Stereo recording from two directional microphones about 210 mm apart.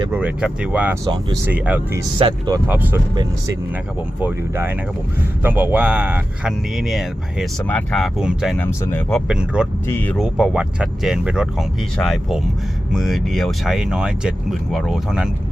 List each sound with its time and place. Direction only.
0.1 s speech: 5° right (ahead or behind)
1.0 s speech: 15° right (ahead or behind)
1.5 s speech: 5° right (ahead or behind)
2.6 s speech: 10° right (ahead or behind)
8.6 s speech: 10° left (ahead or behind)
9.8 s speech: 10° left (ahead or behind)
10.2 s speech: 5° right (ahead or behind)